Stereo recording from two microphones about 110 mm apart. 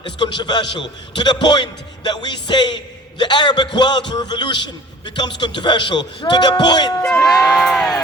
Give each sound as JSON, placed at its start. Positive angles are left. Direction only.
{"t": 0.0, "sound": "a man's voice", "side_deg": 45}
{"t": 7.3, "sound": "crowd", "side_deg": 0}